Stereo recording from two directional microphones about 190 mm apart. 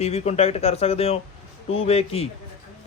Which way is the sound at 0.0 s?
35° left (ahead or behind).